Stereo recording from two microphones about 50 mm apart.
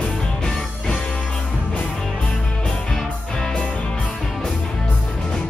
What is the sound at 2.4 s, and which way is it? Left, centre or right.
Music, centre.